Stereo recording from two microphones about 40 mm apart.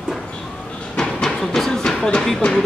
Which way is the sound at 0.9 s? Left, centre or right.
Centre.